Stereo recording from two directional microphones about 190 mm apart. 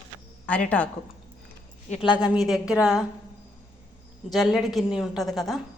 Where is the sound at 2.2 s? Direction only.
5° right (ahead or behind).